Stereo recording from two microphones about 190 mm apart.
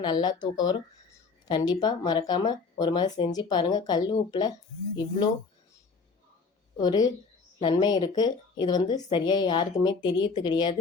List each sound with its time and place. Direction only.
0.0 s speech: 25° left (ahead or behind)
6.7 s speech: 20° left (ahead or behind)